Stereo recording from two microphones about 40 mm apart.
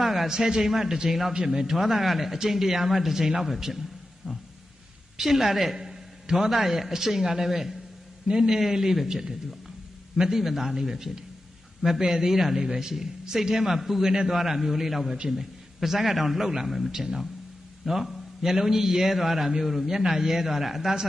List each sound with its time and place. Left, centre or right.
0.0 s a sound: centre
0.4 s a man's voice: centre
8.3 s a man's voice: centre
8.5 s a man's voice: centre